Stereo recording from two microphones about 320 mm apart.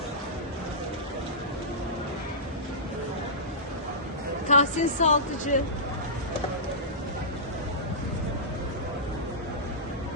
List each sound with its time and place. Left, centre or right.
4.4 s a woman's voice: left